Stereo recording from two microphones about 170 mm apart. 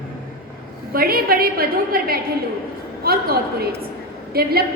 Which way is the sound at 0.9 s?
60° right (ahead or behind).